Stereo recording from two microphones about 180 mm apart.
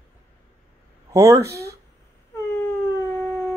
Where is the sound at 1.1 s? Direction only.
15° right (ahead or behind).